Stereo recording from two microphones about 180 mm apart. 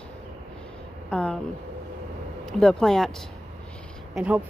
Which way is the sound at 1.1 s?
5° left (ahead or behind).